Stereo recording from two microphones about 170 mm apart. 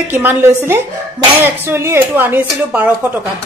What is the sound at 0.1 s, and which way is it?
A woman's voice, 10° right (ahead or behind).